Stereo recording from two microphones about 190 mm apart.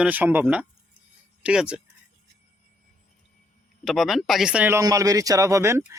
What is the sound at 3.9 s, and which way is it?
Speech, centre (ahead or behind).